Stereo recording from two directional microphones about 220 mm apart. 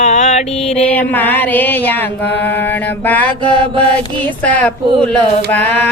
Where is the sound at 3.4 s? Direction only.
20° right (ahead or behind).